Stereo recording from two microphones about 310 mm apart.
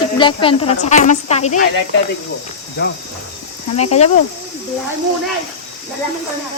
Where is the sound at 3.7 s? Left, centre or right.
Left.